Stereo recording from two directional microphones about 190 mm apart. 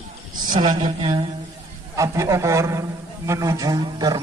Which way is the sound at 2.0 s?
15° right (ahead or behind).